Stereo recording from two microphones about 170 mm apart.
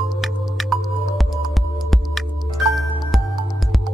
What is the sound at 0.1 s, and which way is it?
Music, centre (ahead or behind).